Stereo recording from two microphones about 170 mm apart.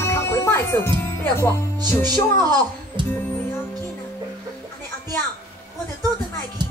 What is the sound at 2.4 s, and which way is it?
Speech, 25° right (ahead or behind).